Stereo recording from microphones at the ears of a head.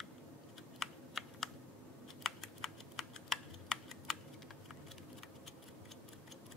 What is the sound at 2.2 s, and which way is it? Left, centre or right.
Typing, left.